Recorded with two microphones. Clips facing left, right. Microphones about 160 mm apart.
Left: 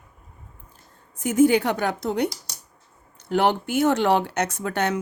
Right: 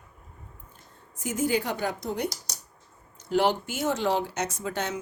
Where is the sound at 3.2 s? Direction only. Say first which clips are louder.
Left 3 dB; 60° left (ahead or behind).